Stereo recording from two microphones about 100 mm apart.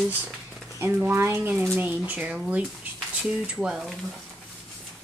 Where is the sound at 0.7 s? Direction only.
20° right (ahead or behind).